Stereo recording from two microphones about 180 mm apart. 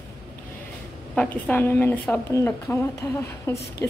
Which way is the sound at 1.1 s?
10° left (ahead or behind).